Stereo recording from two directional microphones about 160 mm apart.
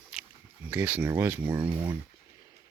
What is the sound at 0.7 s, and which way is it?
Speech, 10° right (ahead or behind).